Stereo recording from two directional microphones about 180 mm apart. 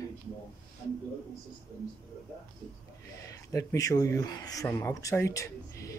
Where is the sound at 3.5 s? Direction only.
20° left (ahead or behind).